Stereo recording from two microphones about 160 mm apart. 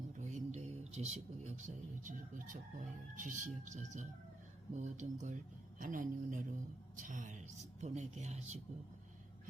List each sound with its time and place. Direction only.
0.2 s a man's voice: 45° right (ahead or behind)